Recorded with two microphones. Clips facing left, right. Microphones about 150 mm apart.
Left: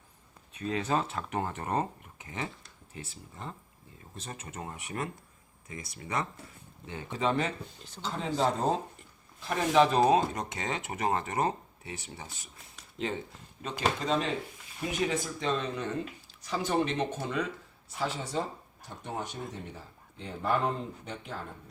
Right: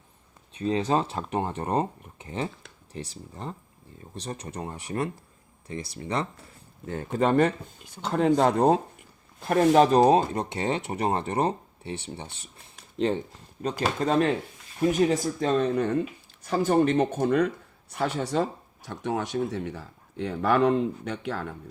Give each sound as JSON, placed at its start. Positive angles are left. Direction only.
{"t": 0.5, "sound": "speech", "side_deg": -30}
{"t": 6.8, "sound": "speech", "side_deg": -50}
{"t": 7.8, "sound": "speech", "side_deg": -10}
{"t": 8.0, "sound": "speech", "side_deg": -60}
{"t": 9.4, "sound": "speech", "side_deg": -50}
{"t": 12.7, "sound": "a sound", "side_deg": -35}
{"t": 13.6, "sound": "speech", "side_deg": -45}
{"t": 14.8, "sound": "speech", "side_deg": -45}